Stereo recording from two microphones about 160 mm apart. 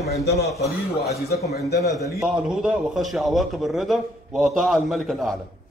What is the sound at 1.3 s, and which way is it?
Speech, 80° left.